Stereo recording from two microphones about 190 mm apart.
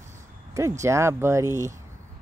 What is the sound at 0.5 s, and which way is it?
Speech, 15° right (ahead or behind).